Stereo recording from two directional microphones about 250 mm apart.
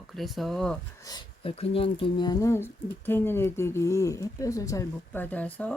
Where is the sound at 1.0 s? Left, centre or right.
Centre.